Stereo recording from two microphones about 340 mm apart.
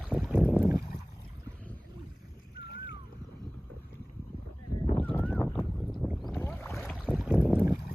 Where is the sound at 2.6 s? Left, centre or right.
Left.